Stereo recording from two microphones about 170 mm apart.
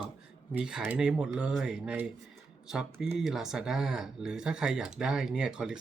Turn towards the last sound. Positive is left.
turn(degrees=-5)  # may be behind; listen again after turning